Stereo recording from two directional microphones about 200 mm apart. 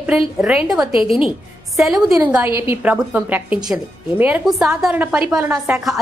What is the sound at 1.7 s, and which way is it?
A woman's voice, centre (ahead or behind).